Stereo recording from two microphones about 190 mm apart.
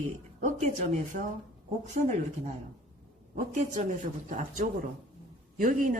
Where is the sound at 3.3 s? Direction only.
40° right (ahead or behind).